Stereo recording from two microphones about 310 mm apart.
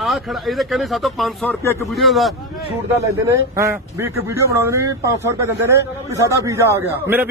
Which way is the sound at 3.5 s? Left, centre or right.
Centre.